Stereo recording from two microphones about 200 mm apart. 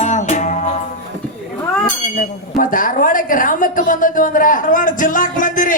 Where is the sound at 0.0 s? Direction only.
35° left (ahead or behind).